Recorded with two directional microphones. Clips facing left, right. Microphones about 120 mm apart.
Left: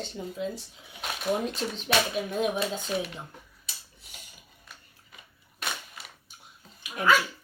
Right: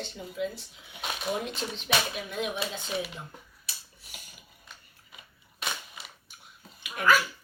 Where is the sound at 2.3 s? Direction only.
40° left (ahead or behind).